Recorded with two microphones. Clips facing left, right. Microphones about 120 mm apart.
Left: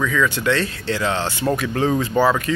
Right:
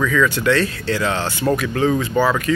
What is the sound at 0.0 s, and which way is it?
Speech, 15° left (ahead or behind).